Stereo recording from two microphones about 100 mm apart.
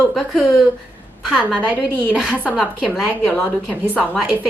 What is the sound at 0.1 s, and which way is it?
A woman's voice, centre (ahead or behind).